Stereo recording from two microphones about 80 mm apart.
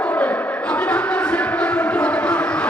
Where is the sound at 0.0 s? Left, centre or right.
Centre.